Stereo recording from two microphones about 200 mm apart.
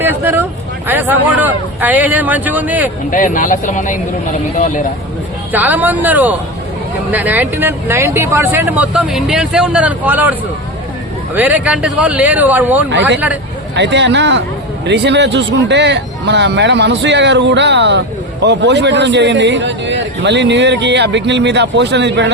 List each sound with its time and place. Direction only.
0.0 s speech: 10° right (ahead or behind)
3.1 s a man's voice: 40° left (ahead or behind)
5.5 s speech: 10° right (ahead or behind)
11.3 s speech: 10° right (ahead or behind)
13.7 s a man's voice: 60° right (ahead or behind)